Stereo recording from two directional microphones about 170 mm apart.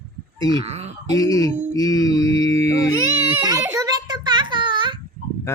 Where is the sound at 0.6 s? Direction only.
40° right (ahead or behind).